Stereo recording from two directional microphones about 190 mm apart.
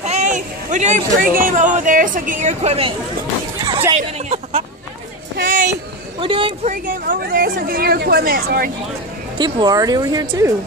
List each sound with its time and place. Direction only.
0.0 s speech: 35° right (ahead or behind)
3.9 s a sound: 35° right (ahead or behind)
5.4 s speech: 45° right (ahead or behind)
6.2 s speech: 25° right (ahead or behind)
6.7 s speech: 45° right (ahead or behind)
9.4 s speech: 20° right (ahead or behind)